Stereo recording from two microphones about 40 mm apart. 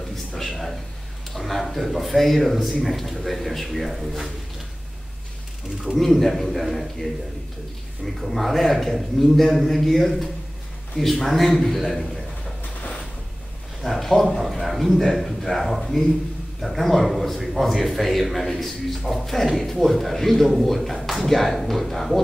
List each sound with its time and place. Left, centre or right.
0.4 s a sound: centre
1.3 s a man's voice: centre
5.9 s a man's voice: centre
13.8 s a man's voice: centre